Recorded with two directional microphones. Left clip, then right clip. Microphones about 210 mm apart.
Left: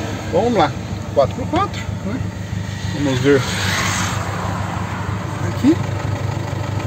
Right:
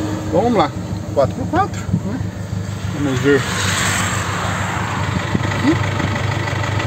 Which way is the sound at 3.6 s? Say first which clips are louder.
Right 1 dB; 50° right (ahead or behind).